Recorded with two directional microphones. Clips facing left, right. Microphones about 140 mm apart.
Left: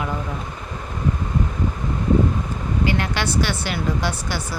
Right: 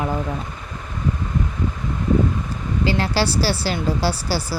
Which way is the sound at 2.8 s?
30° right (ahead or behind).